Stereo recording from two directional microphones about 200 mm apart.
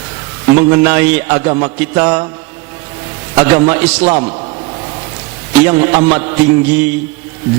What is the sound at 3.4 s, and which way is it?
Music, 10° right (ahead or behind).